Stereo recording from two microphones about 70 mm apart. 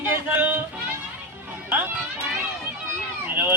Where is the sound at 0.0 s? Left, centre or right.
Right.